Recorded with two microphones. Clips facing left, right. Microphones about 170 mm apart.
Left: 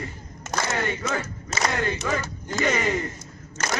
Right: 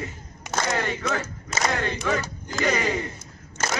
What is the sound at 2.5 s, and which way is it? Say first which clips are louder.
Speech: even; centre (ahead or behind).